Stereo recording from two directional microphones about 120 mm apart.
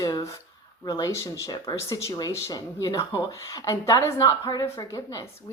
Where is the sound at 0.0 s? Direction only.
30° left (ahead or behind).